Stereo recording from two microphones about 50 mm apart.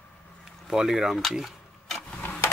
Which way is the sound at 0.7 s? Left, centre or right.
Centre.